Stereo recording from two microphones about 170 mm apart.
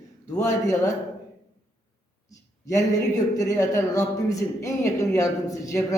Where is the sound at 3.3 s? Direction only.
20° left (ahead or behind).